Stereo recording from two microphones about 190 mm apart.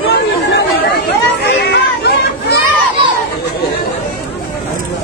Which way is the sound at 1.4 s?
60° left (ahead or behind).